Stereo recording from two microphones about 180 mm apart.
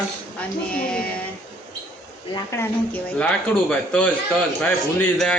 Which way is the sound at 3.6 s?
5° left (ahead or behind).